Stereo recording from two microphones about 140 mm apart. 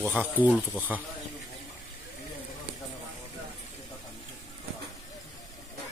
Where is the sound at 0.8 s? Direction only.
10° right (ahead or behind).